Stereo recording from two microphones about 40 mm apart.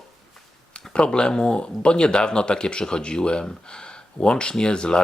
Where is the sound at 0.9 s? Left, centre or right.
Left.